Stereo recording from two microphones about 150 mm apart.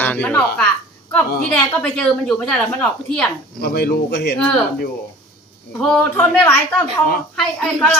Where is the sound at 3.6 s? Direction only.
90° left.